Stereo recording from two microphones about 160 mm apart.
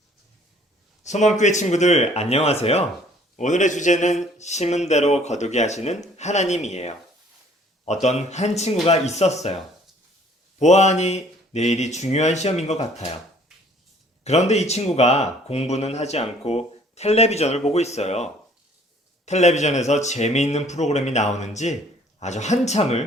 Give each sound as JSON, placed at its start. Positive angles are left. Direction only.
{"t": 1.0, "sound": "speech", "side_deg": 45}
{"t": 8.0, "sound": "speech", "side_deg": 45}
{"t": 10.6, "sound": "speech", "side_deg": 45}
{"t": 14.3, "sound": "speech", "side_deg": 40}